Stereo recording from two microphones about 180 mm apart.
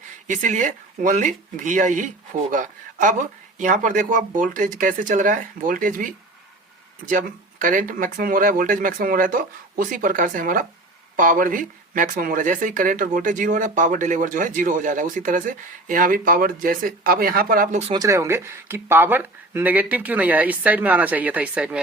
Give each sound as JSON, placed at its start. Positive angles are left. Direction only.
{"t": 0.3, "sound": "speech", "side_deg": -45}
{"t": 17.9, "sound": "speech", "side_deg": -20}